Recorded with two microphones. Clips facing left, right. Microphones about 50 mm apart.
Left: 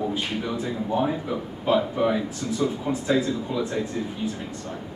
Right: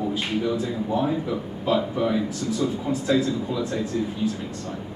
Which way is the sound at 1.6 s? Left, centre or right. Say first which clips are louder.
Left 1 dB; left.